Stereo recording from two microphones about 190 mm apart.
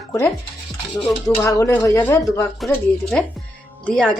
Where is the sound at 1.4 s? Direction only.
15° left (ahead or behind).